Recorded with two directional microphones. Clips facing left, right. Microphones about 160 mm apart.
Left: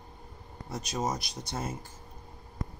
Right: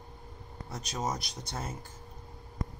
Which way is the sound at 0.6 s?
10° left (ahead or behind).